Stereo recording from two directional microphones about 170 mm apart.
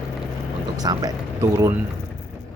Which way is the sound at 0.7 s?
20° right (ahead or behind).